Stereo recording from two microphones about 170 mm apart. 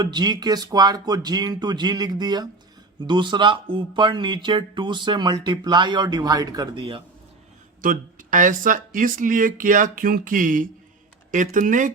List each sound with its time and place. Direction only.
0.0 s speech: 25° right (ahead or behind)
7.8 s speech: 50° right (ahead or behind)